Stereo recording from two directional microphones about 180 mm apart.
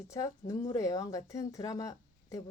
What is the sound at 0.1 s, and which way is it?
A woman's voice, 20° left (ahead or behind).